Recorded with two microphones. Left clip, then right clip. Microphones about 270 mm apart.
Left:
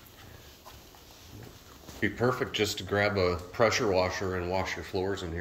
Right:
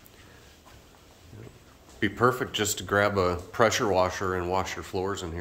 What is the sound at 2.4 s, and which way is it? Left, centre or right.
Speech, right.